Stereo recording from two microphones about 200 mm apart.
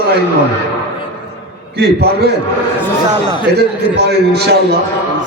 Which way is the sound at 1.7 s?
50° right (ahead or behind).